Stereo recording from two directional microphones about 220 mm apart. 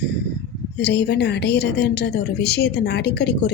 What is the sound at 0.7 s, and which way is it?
Speech, 50° left (ahead or behind).